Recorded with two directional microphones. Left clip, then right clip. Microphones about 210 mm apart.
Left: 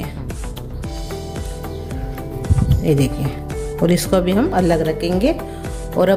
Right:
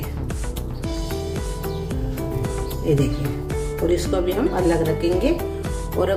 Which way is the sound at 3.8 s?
50° left (ahead or behind).